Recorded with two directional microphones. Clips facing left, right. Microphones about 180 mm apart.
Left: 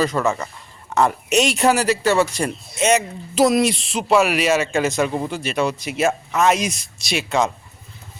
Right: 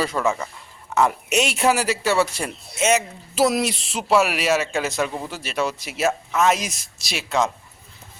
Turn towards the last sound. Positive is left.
turn(degrees=0)  # may be behind; listen again after turning